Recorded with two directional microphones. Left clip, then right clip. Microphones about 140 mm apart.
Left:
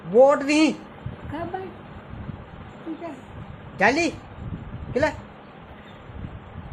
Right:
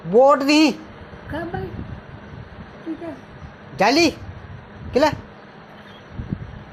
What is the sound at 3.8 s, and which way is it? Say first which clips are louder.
Speech: right 4 dB; 55° right (ahead or behind).